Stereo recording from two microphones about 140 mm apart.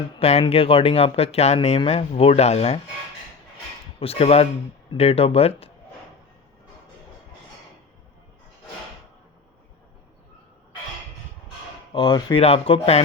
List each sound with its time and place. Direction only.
0.2 s speech: 45° left (ahead or behind)
4.0 s speech: 45° left (ahead or behind)
11.9 s speech: 35° left (ahead or behind)
12.4 s speech: 45° left (ahead or behind)